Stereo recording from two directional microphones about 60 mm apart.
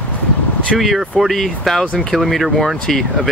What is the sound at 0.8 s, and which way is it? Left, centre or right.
Speech, centre.